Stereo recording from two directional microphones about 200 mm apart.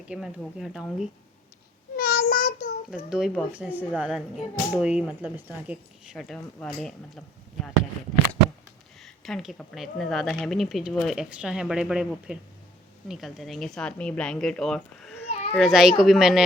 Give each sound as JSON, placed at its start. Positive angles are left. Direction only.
{"t": 0.1, "sound": "speech", "side_deg": -5}
{"t": 2.0, "sound": "child singing", "side_deg": 50}
{"t": 3.1, "sound": "speech", "side_deg": 0}
{"t": 9.0, "sound": "speech", "side_deg": 0}
{"t": 15.3, "sound": "children playing", "side_deg": 30}
{"t": 15.5, "sound": "speech", "side_deg": 0}